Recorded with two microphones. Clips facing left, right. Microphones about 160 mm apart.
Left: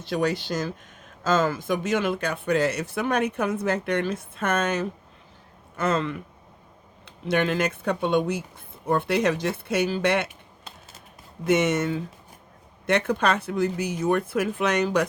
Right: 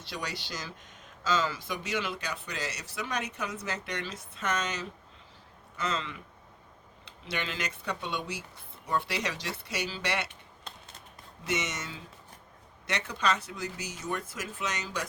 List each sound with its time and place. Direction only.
0.0 s speech: 50° left (ahead or behind)
10.2 s typing: 5° left (ahead or behind)
11.4 s speech: 55° left (ahead or behind)